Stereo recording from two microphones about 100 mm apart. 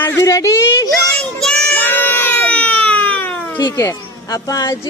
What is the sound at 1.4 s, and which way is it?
Child singing, 10° left (ahead or behind).